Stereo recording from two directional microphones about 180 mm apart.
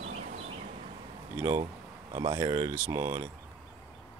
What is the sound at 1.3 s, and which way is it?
Speech, 15° right (ahead or behind).